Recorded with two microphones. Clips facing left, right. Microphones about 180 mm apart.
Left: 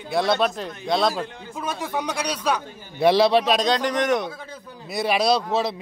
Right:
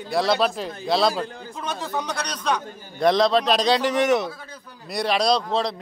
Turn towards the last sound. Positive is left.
turn(degrees=5)  # may be behind; listen again after turning